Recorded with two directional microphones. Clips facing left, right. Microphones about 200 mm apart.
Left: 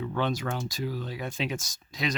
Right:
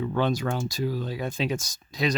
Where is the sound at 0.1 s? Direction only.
40° right (ahead or behind).